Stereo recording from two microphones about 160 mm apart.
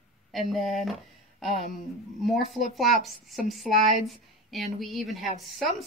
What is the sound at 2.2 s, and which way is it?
A woman's voice, centre (ahead or behind).